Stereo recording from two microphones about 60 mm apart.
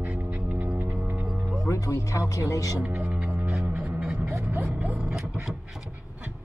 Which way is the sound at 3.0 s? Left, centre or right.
Centre.